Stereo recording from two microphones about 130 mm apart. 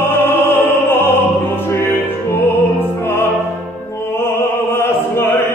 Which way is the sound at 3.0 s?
20° left (ahead or behind).